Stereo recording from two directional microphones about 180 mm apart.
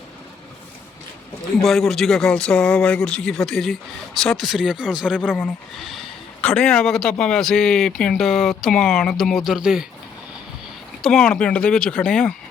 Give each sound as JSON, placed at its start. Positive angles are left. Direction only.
{"t": 1.6, "sound": "a man's voice", "side_deg": 0}
{"t": 11.0, "sound": "a man's voice", "side_deg": 5}